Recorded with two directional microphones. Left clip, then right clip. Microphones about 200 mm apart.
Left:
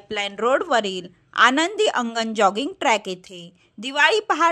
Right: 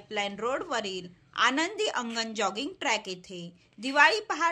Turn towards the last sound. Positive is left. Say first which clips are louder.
# left 5 dB
turn(degrees=45)  # may be behind; listen again after turning